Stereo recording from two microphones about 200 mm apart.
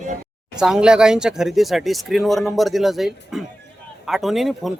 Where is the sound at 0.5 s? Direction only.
5° right (ahead or behind).